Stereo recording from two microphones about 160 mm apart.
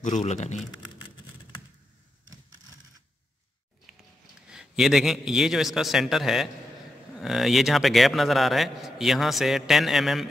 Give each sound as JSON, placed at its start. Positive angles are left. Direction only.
{"t": 0.0, "sound": "a man's voice", "side_deg": 50}
{"t": 4.5, "sound": "a man's voice", "side_deg": 0}